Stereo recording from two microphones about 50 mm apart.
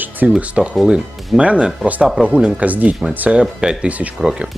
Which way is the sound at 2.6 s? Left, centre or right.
Right.